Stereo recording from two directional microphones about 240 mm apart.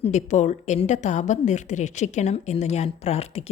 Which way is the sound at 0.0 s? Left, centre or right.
Left.